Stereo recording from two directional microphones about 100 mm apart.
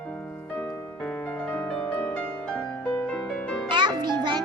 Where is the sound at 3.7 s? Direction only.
50° right (ahead or behind).